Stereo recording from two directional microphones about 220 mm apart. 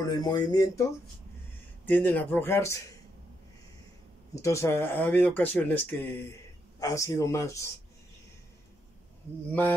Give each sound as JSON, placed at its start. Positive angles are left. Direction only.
{"t": 0.1, "sound": "speech", "side_deg": 20}
{"t": 1.9, "sound": "speech", "side_deg": 10}
{"t": 4.4, "sound": "speech", "side_deg": 15}